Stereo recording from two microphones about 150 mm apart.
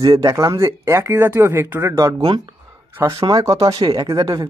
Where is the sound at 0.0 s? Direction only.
25° right (ahead or behind).